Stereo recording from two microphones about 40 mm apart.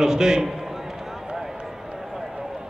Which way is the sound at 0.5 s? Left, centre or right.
Centre.